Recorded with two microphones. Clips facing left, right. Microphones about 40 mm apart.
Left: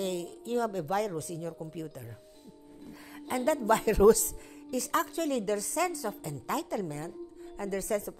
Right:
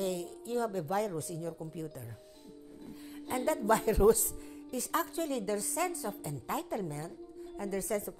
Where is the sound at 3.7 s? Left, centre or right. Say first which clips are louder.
Left 4 dB; left.